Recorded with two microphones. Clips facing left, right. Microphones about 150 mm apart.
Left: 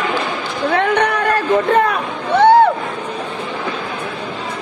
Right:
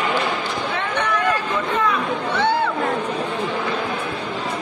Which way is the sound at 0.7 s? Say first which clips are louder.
Left 9 dB; 60° left (ahead or behind).